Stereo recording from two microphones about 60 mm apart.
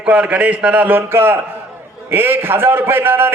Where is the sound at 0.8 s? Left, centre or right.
Right.